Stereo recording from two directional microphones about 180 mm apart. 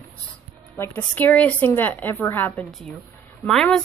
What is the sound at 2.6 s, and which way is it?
Speech, centre (ahead or behind).